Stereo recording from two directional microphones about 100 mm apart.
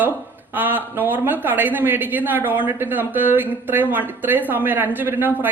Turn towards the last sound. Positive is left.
turn(degrees=-20)  # may be behind; listen again after turning